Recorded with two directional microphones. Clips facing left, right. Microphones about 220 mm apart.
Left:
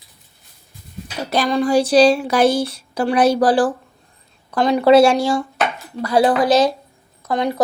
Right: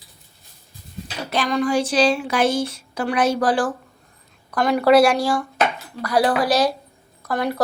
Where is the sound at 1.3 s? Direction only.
35° left (ahead or behind).